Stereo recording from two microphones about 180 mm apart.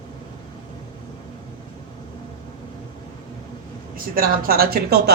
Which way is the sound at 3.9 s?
50° right (ahead or behind).